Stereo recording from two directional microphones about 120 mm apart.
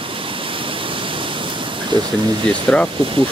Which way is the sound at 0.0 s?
45° right (ahead or behind).